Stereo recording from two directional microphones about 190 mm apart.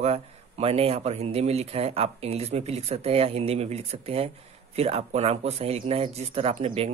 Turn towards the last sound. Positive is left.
turn(degrees=-30)  # may be behind; listen again after turning